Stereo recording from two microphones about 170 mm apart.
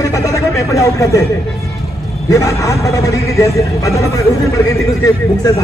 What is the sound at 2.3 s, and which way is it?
A man's voice, 20° left (ahead or behind).